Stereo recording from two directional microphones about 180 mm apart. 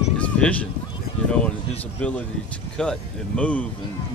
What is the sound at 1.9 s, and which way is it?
Speech, 10° left (ahead or behind).